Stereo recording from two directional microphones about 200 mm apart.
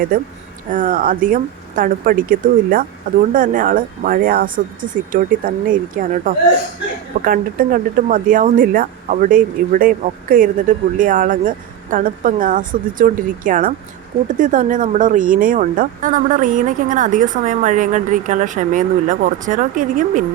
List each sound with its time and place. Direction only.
0.7 s speech: 45° right (ahead or behind)
7.3 s speech: 45° right (ahead or behind)